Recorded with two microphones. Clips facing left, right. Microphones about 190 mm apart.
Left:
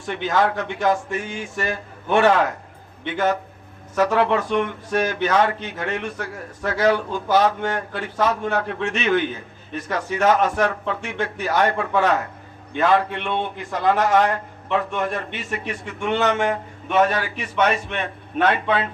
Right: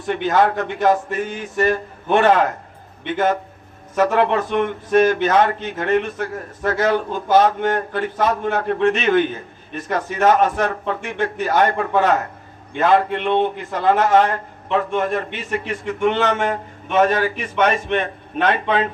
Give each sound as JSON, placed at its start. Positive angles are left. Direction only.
{"t": 0.1, "sound": "a man's voice", "side_deg": -45}